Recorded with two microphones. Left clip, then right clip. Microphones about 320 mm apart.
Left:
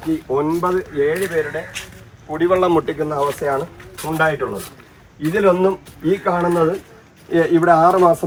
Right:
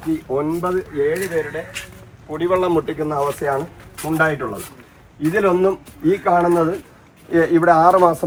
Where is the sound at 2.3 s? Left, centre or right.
Left.